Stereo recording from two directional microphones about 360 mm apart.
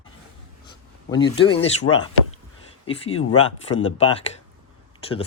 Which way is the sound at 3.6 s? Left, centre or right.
Centre.